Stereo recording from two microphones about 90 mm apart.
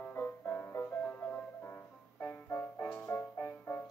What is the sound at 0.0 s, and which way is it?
Music, 25° left (ahead or behind).